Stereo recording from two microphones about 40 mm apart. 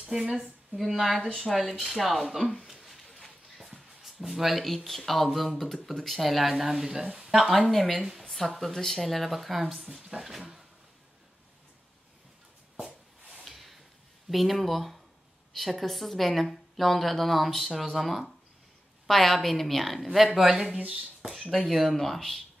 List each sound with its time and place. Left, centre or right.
0.8 s a woman's voice: centre
2.8 s a sound: centre
3.5 s speech: centre
7.5 s a woman's voice: centre
9.9 s speech: centre
13.4 s a sound: centre
14.3 s a woman's voice: centre
20.8 s speech: right
21.5 s speech: centre